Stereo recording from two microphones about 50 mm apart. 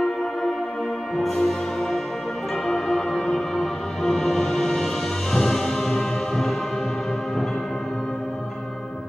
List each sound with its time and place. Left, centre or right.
0.0 s music: centre